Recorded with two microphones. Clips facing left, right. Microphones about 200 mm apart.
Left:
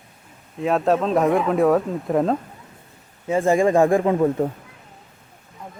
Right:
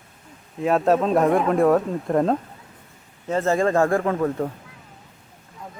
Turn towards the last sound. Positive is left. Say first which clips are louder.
# left 4 dB
turn(degrees=20)  # may be behind; listen again after turning